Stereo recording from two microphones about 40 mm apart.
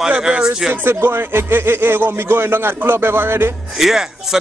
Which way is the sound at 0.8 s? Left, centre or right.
Right.